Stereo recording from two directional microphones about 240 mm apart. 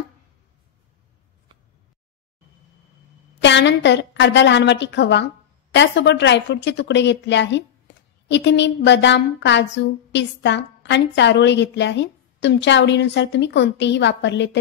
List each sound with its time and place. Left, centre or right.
3.4 s a woman's voice: left
7.9 s a sound: left
8.3 s a woman's voice: left